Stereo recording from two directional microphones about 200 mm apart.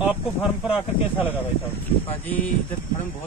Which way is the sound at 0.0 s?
5° right (ahead or behind).